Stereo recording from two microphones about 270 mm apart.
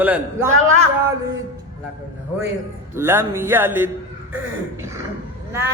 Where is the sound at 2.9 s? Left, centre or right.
Centre.